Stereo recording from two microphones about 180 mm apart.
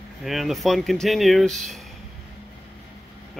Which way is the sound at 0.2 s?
Centre (ahead or behind).